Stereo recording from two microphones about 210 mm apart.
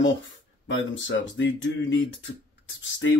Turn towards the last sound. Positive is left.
turn(degrees=60)  # may be behind; listen again after turning